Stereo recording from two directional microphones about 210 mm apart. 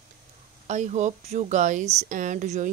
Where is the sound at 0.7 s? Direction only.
35° right (ahead or behind).